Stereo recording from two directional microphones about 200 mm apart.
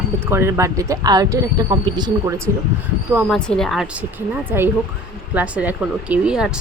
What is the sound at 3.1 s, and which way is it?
Speech, 5° right (ahead or behind).